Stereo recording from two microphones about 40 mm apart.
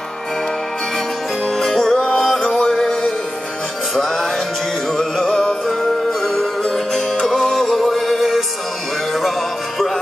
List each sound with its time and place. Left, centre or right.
0.9 s music: centre
5.8 s music: centre